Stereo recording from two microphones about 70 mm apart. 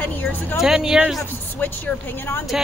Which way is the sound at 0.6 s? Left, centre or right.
Centre.